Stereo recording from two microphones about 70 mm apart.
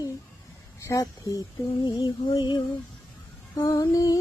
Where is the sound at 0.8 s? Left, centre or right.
Left.